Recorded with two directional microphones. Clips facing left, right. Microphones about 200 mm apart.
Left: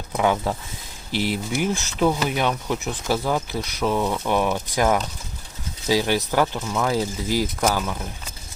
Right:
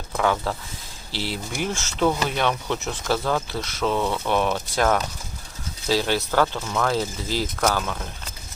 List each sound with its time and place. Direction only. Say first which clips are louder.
0.1 s speech: left 2 dB; 15° left (ahead or behind)